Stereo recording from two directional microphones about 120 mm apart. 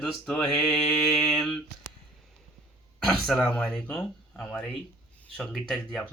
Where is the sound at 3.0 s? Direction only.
Centre (ahead or behind).